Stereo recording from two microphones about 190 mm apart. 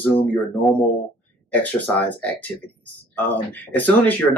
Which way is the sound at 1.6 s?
10° left (ahead or behind).